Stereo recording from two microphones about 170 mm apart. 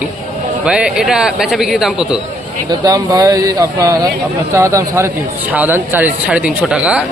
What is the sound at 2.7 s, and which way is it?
A man's voice, 20° right (ahead or behind).